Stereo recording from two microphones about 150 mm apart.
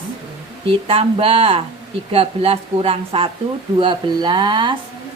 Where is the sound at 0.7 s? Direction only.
40° right (ahead or behind).